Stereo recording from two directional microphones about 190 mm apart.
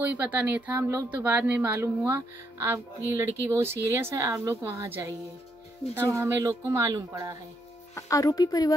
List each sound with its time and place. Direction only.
0.1 s speech: 10° right (ahead or behind)
6.1 s speech: 15° right (ahead or behind)
7.9 s a woman's voice: 15° left (ahead or behind)